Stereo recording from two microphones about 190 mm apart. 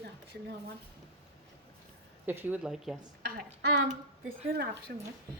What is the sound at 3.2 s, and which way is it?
A woman's voice, 60° right (ahead or behind).